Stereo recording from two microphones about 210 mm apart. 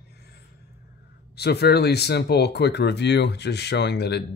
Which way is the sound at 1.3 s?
50° left (ahead or behind).